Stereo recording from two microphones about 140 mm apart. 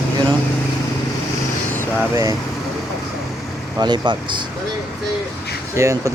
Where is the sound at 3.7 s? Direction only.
25° right (ahead or behind).